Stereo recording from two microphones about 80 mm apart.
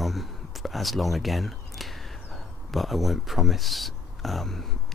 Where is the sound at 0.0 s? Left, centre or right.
Centre.